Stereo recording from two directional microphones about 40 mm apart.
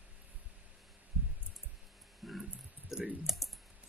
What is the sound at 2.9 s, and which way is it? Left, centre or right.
Speech, centre.